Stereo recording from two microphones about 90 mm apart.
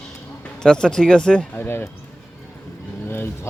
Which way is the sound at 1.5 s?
25° left (ahead or behind).